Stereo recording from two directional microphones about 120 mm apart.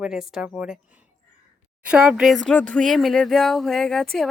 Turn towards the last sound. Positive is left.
turn(degrees=5)  # may be behind; listen again after turning